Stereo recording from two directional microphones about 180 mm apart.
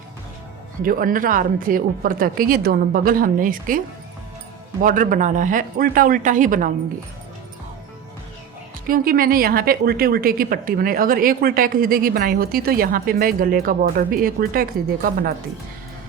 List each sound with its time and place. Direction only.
0.8 s a woman's voice: 50° right (ahead or behind)
4.8 s a woman's voice: 45° right (ahead or behind)
8.9 s a woman's voice: 55° right (ahead or behind)